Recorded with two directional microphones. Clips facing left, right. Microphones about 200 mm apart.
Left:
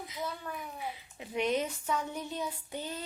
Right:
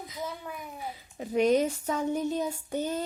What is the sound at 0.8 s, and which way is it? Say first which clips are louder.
A child's voice: right 3 dB; 40° right (ahead or behind).